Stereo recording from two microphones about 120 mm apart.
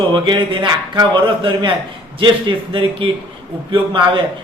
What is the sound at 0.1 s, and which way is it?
A man's voice, 40° right (ahead or behind).